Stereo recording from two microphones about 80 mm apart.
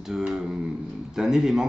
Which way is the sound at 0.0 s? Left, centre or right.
Centre.